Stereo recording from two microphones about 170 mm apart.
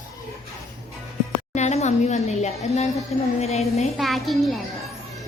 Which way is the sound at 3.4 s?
40° left (ahead or behind).